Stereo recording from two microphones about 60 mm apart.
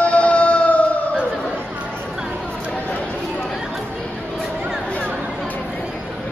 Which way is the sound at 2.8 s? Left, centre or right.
Left.